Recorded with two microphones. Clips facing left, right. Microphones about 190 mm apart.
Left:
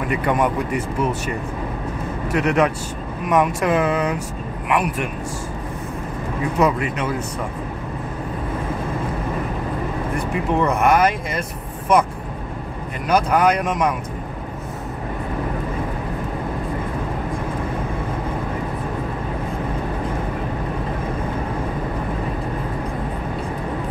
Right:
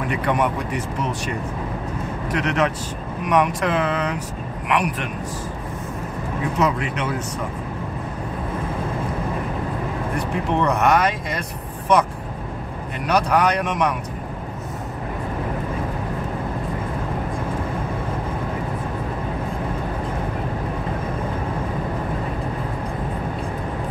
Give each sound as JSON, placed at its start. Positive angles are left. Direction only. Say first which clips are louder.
{"t": 0.1, "sound": "speech", "louder": "left 2 dB", "side_deg": 5}
{"t": 2.3, "sound": "speech", "louder": "left 4 dB", "side_deg": 10}
{"t": 10.3, "sound": "speech", "louder": "left 1 dB", "side_deg": 5}
{"t": 13.0, "sound": "speech", "louder": "left 2 dB", "side_deg": 5}